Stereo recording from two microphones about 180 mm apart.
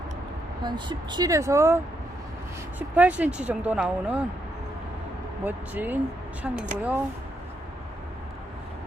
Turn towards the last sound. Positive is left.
turn(degrees=-10)  # may be behind; listen again after turning